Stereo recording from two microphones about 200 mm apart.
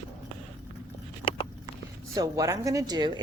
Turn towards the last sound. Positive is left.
turn(degrees=-20)  # may be behind; listen again after turning